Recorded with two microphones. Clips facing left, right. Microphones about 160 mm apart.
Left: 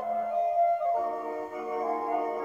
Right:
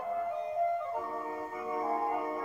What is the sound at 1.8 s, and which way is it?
Music, 35° left (ahead or behind).